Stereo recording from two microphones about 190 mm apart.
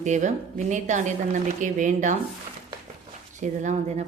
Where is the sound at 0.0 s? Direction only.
40° right (ahead or behind).